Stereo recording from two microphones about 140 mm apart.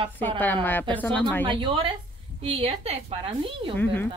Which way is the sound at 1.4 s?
35° right (ahead or behind).